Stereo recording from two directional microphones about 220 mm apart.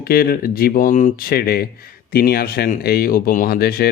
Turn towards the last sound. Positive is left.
turn(degrees=45)  # may be behind; listen again after turning